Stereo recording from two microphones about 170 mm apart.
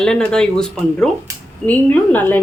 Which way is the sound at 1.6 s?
10° left (ahead or behind).